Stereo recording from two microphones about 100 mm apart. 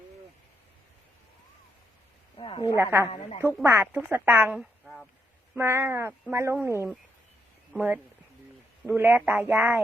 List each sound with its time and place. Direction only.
2.4 s a woman's voice: 65° left (ahead or behind)
2.7 s speech: 20° right (ahead or behind)
4.5 s a sound: 5° right (ahead or behind)
5.5 s speech: 25° right (ahead or behind)